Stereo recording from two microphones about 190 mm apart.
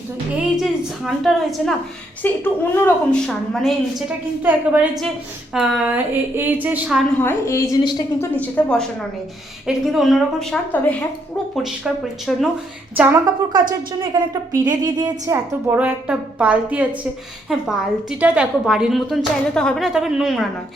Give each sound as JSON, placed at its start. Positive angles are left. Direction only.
{"t": 0.5, "sound": "a woman's voice", "side_deg": 0}
{"t": 7.2, "sound": "a woman's voice", "side_deg": 15}
{"t": 13.5, "sound": "a woman's voice", "side_deg": -20}